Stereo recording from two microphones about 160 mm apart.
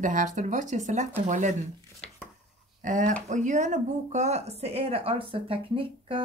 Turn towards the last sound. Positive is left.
turn(degrees=-35)  # may be behind; listen again after turning